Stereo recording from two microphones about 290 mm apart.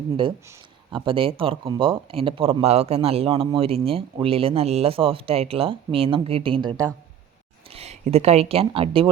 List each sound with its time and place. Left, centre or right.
0.9 s speech: centre